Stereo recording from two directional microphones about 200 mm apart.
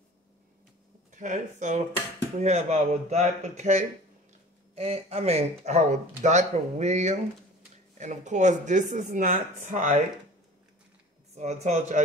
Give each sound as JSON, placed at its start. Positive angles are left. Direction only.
{"t": 1.1, "sound": "speech", "side_deg": -40}
{"t": 11.3, "sound": "speech", "side_deg": -35}